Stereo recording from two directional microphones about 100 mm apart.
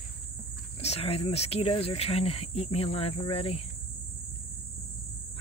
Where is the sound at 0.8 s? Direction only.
85° left.